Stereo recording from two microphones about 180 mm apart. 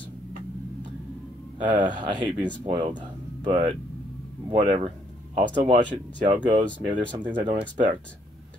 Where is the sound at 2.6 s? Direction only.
30° right (ahead or behind).